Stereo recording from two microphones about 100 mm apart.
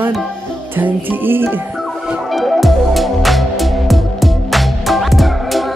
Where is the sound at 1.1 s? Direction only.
20° right (ahead or behind).